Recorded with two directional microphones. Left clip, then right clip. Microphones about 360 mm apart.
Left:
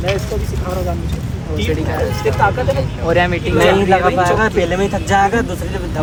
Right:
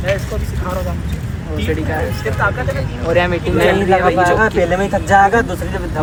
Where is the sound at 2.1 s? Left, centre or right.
Centre.